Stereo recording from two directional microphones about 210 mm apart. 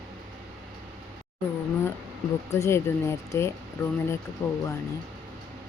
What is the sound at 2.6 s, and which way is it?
Speech, 10° left (ahead or behind).